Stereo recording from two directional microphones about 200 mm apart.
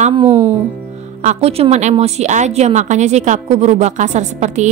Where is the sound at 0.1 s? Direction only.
25° right (ahead or behind).